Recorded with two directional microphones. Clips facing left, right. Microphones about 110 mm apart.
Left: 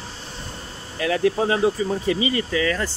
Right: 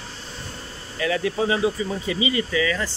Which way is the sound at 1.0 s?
50° left (ahead or behind).